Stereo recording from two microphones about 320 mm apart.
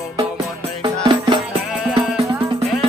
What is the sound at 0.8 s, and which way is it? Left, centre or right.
Music, centre.